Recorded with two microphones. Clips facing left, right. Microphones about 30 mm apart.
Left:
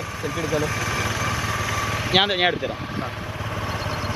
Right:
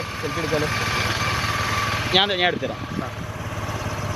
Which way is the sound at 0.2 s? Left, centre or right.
Right.